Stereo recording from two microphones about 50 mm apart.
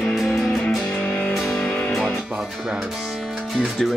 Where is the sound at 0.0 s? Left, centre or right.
Centre.